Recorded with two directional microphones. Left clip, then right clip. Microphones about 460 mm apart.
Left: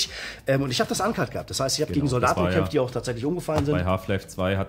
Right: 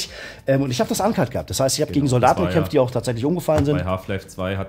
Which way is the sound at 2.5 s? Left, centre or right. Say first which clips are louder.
Right 5 dB; right.